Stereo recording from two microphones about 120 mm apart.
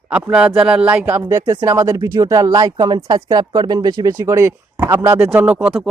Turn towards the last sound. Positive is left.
turn(degrees=-5)  # may be behind; listen again after turning